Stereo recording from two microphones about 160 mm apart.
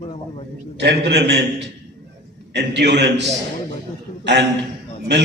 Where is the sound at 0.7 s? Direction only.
90° right.